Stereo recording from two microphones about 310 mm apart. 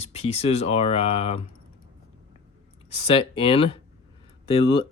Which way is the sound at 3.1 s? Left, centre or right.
Centre.